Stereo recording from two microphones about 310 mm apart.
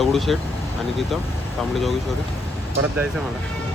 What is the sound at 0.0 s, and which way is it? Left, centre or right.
Speech, centre.